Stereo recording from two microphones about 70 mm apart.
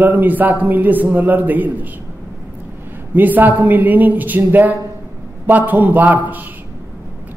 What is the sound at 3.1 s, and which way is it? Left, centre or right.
A man's voice, right.